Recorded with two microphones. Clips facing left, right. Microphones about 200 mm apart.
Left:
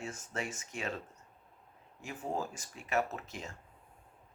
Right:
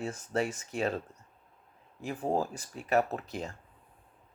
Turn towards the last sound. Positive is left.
turn(degrees=-35)  # may be behind; listen again after turning